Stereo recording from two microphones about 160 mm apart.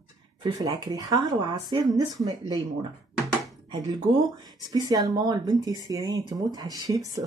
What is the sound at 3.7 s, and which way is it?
Speech, 25° right (ahead or behind).